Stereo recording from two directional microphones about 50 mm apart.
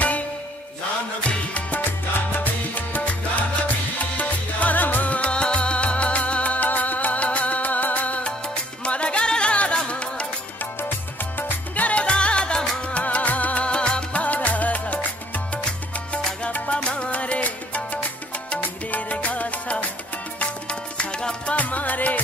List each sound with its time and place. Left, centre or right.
1.9 s music: left
4.2 s music: left
11.3 s music: left
12.0 s music: left
21.5 s music: left